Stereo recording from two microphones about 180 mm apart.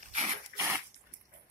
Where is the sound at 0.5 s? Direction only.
15° right (ahead or behind).